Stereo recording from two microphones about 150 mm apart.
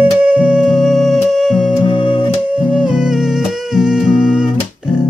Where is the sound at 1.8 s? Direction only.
35° left (ahead or behind).